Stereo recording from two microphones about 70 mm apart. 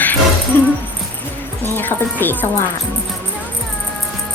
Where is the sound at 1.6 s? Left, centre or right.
Left.